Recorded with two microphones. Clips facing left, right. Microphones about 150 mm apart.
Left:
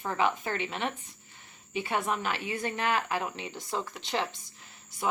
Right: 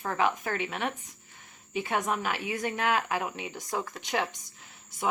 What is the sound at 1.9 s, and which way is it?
A woman's voice, 15° right (ahead or behind).